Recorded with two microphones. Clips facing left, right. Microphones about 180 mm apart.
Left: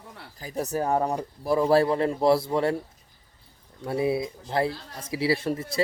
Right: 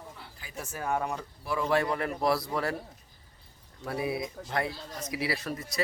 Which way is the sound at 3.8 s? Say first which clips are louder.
Left 6 dB; 25° left (ahead or behind).